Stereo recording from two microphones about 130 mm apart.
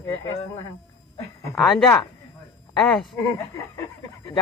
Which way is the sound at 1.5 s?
Centre (ahead or behind).